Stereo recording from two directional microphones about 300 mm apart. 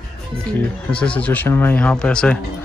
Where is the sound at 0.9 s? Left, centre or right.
Centre.